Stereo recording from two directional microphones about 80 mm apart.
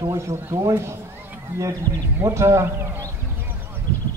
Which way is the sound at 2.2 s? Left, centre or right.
Right.